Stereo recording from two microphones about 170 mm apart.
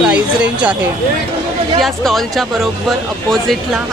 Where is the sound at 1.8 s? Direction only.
Centre (ahead or behind).